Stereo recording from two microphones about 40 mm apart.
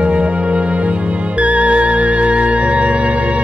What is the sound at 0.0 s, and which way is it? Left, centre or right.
Music, right.